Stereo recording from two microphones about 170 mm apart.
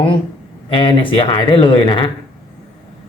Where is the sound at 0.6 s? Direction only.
30° left (ahead or behind).